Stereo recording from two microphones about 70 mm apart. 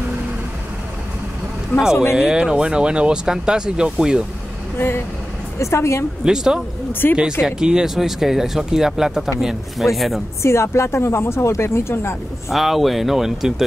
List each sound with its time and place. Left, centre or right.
2.1 s speech: centre
4.7 s speech: left
6.2 s speech: centre
6.9 s speech: left
7.4 s speech: centre
10.4 s speech: left
12.4 s speech: centre